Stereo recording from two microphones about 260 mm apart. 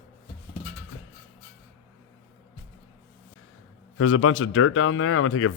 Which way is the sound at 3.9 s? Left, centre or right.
Left.